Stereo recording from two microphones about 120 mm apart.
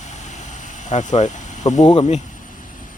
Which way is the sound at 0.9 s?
75° left (ahead or behind).